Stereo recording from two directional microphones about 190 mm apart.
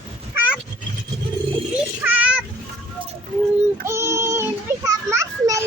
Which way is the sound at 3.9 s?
15° right (ahead or behind).